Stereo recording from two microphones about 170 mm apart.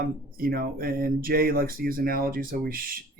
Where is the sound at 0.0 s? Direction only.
60° right (ahead or behind).